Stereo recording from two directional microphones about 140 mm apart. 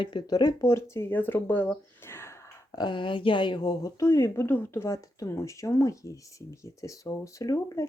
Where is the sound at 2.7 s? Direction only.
35° left (ahead or behind).